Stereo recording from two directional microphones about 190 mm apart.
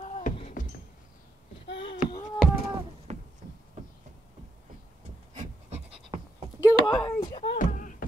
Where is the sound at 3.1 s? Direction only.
35° right (ahead or behind).